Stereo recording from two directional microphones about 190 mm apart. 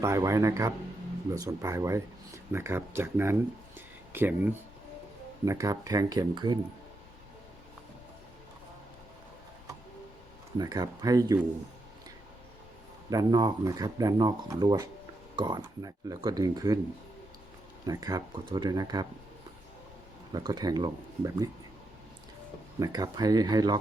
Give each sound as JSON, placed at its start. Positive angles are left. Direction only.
{"t": 0.0, "sound": "speech", "side_deg": -15}
{"t": 3.8, "sound": "a sound", "side_deg": -10}
{"t": 5.5, "sound": "speech", "side_deg": -15}
{"t": 10.6, "sound": "speech", "side_deg": -20}
{"t": 13.1, "sound": "speech", "side_deg": -20}
{"t": 17.8, "sound": "speech", "side_deg": -20}
{"t": 20.3, "sound": "speech", "side_deg": -20}
{"t": 22.8, "sound": "speech", "side_deg": -20}